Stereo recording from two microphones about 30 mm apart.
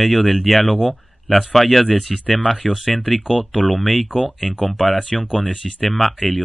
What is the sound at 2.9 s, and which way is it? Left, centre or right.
Speech, left.